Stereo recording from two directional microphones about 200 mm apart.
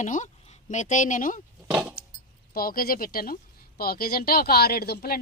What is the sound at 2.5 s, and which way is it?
A woman's voice, 45° left (ahead or behind).